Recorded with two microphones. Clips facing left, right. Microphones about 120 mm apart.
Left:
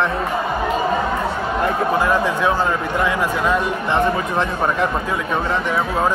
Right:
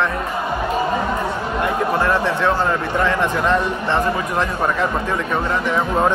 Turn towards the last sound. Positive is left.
turn(degrees=5)  # may be behind; listen again after turning